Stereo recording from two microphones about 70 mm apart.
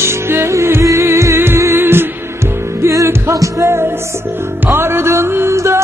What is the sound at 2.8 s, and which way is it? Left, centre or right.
Music, right.